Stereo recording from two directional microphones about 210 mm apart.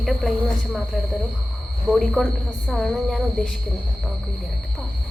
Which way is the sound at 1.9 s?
Centre (ahead or behind).